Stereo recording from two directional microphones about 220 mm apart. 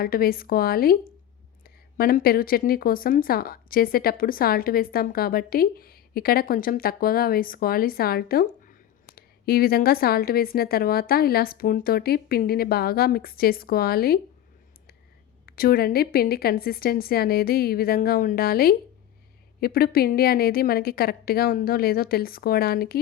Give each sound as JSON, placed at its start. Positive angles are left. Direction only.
{"t": 0.0, "sound": "speech", "side_deg": 40}
{"t": 15.4, "sound": "speech", "side_deg": 45}